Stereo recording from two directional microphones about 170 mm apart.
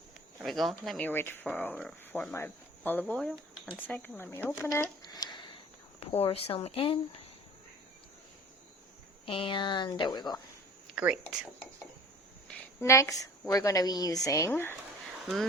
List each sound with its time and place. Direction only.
0.4 s speech: centre (ahead or behind); by 5.5 s 25° left (ahead or behind)
6.0 s speech: 35° left (ahead or behind)
9.2 s speech: 30° left (ahead or behind)
10.9 s speech: 5° right (ahead or behind)
12.5 s a sound: 15° left (ahead or behind)
13.5 s speech: 20° left (ahead or behind)